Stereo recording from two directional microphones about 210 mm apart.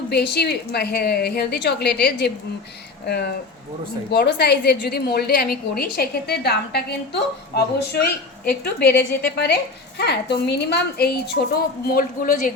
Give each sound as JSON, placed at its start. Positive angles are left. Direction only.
{"t": 0.1, "sound": "a woman's voice", "side_deg": 50}